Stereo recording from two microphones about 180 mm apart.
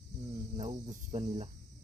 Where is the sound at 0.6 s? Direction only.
40° right (ahead or behind).